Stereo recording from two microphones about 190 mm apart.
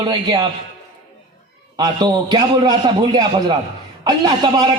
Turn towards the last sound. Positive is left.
turn(degrees=-20)  # may be behind; listen again after turning